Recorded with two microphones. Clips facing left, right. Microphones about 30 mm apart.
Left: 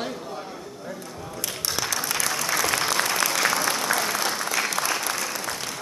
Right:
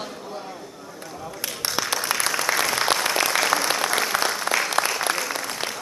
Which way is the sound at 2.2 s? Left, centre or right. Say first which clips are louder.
Right 1 dB; right.